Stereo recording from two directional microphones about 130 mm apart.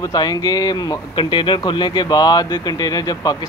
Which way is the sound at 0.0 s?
30° left (ahead or behind).